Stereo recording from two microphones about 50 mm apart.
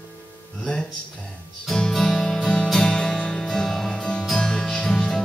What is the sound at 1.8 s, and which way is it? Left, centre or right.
Music, centre.